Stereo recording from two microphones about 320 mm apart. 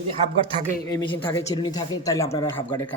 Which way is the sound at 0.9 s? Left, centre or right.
Centre.